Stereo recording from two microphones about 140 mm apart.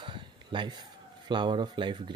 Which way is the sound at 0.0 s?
35° right (ahead or behind).